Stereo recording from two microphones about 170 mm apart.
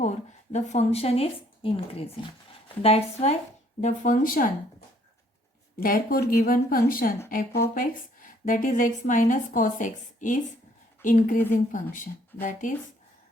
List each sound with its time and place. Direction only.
0.5 s a woman's voice: 40° left (ahead or behind)
5.8 s a woman's voice: 55° left (ahead or behind)